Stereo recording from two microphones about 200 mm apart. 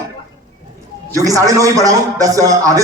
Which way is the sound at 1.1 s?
15° right (ahead or behind).